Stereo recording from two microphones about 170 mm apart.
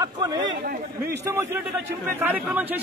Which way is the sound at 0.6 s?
60° right (ahead or behind).